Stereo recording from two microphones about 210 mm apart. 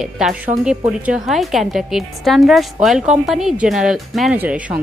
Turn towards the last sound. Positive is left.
turn(degrees=-5)  # may be behind; listen again after turning